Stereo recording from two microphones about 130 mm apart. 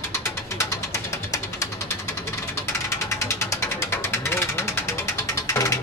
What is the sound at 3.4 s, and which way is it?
Vehicle, 25° left (ahead or behind).